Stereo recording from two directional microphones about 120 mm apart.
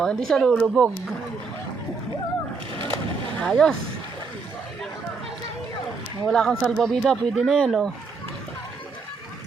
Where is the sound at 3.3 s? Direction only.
5° left (ahead or behind).